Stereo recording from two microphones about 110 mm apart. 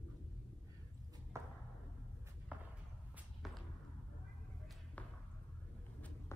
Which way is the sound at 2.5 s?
15° right (ahead or behind).